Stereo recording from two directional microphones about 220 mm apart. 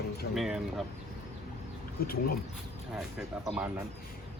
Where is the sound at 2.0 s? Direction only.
40° left (ahead or behind).